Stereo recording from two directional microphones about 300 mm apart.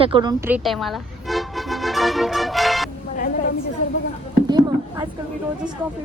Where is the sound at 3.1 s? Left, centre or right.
Left.